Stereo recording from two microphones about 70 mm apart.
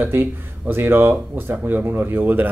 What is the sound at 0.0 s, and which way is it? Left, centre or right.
Speech, right.